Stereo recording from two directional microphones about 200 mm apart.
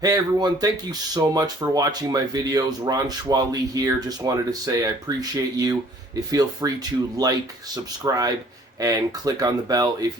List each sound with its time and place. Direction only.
0.0 s speech: 20° right (ahead or behind)